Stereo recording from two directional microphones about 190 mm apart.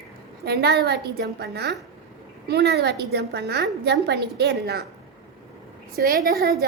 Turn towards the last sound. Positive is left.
turn(degrees=-50)  # may be behind; listen again after turning